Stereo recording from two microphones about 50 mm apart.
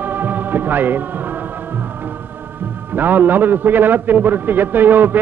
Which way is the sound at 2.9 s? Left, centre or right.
Right.